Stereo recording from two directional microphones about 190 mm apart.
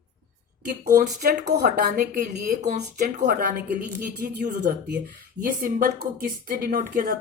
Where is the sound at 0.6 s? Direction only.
45° right (ahead or behind).